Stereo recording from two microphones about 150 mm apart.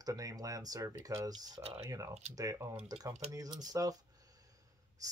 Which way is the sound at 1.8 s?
20° right (ahead or behind).